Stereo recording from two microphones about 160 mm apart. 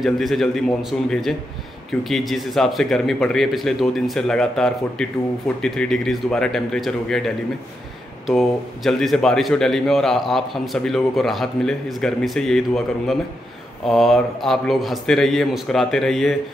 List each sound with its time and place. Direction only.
0.0 s a man's voice: centre (ahead or behind)